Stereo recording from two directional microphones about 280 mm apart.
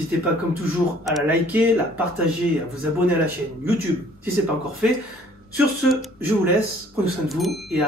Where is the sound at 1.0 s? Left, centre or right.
Centre.